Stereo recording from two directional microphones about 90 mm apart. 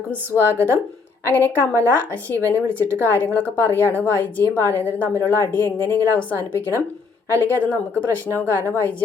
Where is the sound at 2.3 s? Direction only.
20° left (ahead or behind).